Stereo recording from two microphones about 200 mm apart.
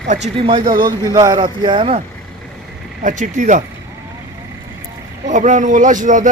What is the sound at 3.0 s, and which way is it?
Speech, 40° right (ahead or behind).